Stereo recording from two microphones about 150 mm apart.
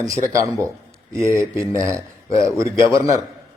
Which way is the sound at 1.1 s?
20° right (ahead or behind).